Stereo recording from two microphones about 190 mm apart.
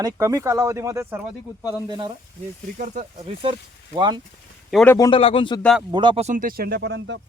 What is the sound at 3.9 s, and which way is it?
Speech, 25° right (ahead or behind).